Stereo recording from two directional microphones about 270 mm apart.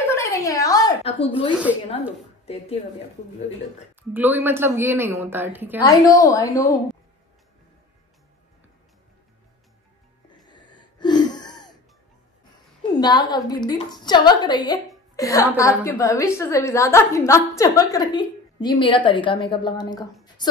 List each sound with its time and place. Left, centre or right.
0.1 s a sound: centre
2.4 s speech: left
4.1 s a woman's voice: centre
5.8 s a woman's voice: centre
10.4 s a sound: centre
12.9 s a woman's voice: centre